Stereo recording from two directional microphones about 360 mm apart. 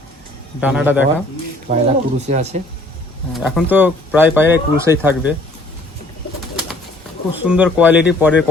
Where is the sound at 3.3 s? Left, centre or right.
Centre.